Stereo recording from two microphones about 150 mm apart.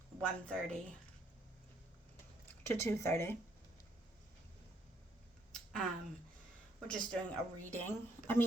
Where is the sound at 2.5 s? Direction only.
20° left (ahead or behind).